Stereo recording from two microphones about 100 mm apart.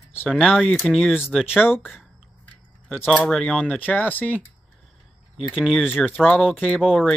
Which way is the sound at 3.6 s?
15° left (ahead or behind).